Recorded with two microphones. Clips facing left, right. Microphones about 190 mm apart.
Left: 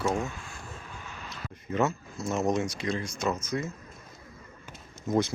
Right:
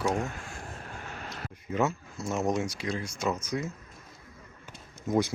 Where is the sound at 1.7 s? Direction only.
10° right (ahead or behind).